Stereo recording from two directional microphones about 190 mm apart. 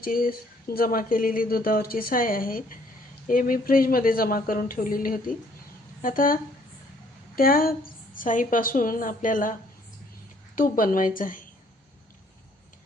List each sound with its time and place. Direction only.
0.0 s speech: 50° left (ahead or behind)